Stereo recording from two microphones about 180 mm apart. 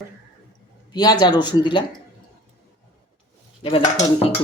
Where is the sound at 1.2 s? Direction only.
25° left (ahead or behind).